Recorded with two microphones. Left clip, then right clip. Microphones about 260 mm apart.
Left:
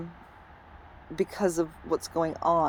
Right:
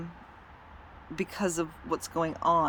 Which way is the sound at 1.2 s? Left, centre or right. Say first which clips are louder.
Left 4 dB; centre.